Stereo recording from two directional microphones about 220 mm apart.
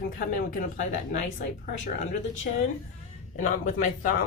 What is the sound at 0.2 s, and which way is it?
Speech, 40° left (ahead or behind).